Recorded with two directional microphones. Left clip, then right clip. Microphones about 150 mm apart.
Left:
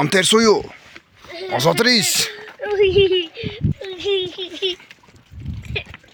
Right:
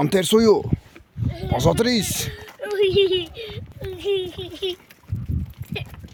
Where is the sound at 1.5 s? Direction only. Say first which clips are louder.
Left 4 dB; 15° right (ahead or behind).